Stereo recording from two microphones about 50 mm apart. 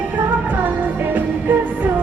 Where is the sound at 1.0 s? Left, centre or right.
Right.